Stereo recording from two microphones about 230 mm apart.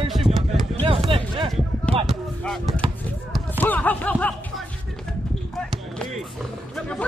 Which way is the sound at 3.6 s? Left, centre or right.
Centre.